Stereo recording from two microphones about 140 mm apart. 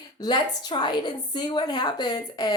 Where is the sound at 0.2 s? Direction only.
30° left (ahead or behind).